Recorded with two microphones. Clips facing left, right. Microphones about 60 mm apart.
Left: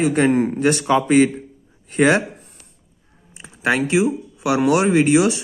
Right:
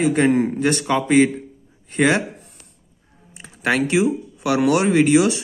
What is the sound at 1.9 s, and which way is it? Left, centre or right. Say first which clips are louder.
Speech: left 2 dB; left.